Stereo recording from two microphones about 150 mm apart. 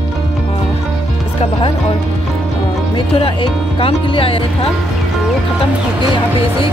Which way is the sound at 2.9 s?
35° left (ahead or behind).